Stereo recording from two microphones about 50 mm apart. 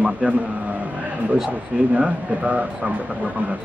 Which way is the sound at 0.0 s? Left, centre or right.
Right.